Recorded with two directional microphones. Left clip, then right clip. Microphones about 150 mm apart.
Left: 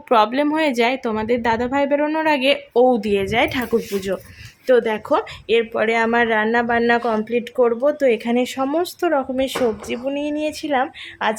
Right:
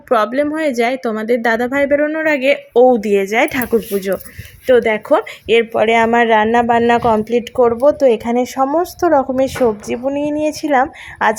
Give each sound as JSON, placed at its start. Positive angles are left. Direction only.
{"t": 0.1, "sound": "a woman's voice", "side_deg": -10}
{"t": 2.7, "sound": "a woman's voice", "side_deg": -20}
{"t": 9.0, "sound": "a woman's voice", "side_deg": -25}